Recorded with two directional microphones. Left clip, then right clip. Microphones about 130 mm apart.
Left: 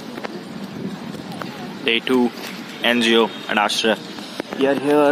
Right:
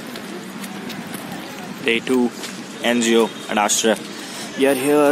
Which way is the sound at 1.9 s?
15° right (ahead or behind).